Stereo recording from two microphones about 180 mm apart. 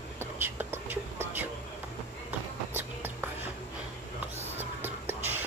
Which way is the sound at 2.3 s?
10° right (ahead or behind).